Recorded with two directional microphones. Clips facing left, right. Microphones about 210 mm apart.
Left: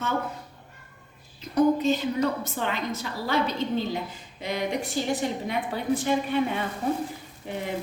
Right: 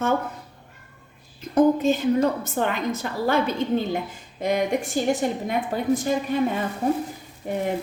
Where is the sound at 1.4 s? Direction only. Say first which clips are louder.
Right 3 dB; 50° right (ahead or behind).